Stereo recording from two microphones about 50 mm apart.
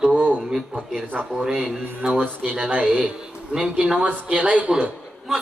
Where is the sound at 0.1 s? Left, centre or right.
Right.